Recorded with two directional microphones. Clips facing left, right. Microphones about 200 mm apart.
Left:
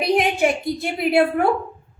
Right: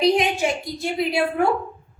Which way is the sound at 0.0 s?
55° left (ahead or behind).